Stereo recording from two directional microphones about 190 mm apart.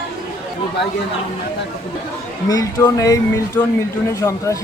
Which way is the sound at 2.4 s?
20° left (ahead or behind).